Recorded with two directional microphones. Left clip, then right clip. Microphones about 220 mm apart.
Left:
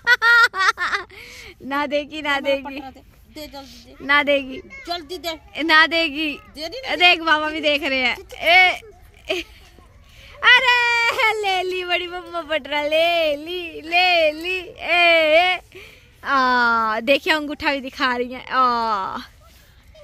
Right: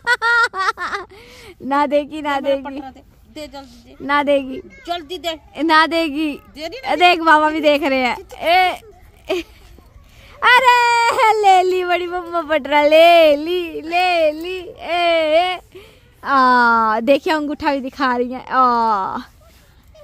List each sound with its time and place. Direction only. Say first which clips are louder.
0.0 s a sound: left 1 dB; 20° right (ahead or behind)
3.3 s a woman's voice: right 3 dB; 5° right (ahead or behind)
4.0 s speech: right 1 dB; 20° right (ahead or behind)
4.8 s speech: right 4 dB; 5° right (ahead or behind)
5.5 s speech: right 1 dB; 25° right (ahead or behind)
14.4 s speech: left 1 dB; 15° right (ahead or behind)